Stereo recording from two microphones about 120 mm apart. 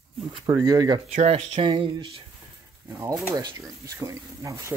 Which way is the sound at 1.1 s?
70° right (ahead or behind).